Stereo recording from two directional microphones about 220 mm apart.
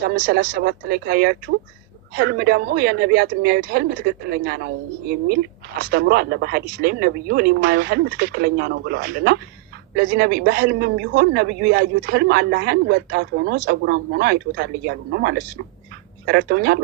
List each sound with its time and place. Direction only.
0.1 s a man's voice: 50° right (ahead or behind)